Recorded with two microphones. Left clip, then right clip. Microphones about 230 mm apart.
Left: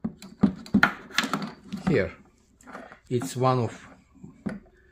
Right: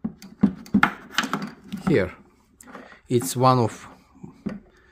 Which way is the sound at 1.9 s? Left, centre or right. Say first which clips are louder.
Right 3 dB; right.